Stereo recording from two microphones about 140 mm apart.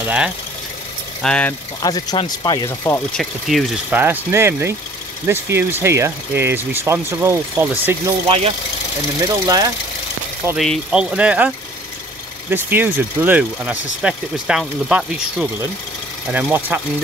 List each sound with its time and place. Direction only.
1.2 s speech: 5° left (ahead or behind)
1.8 s speech: 30° left (ahead or behind)
2.8 s speech: 15° left (ahead or behind)
3.2 s speech: centre (ahead or behind)
3.9 s speech: 15° right (ahead or behind)
8.3 s speech: 45° right (ahead or behind)
9.2 s speech: 30° right (ahead or behind)
10.6 s speech: centre (ahead or behind)